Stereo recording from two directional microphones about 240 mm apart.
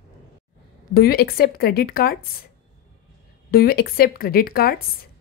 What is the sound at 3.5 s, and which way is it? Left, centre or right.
Speech, left.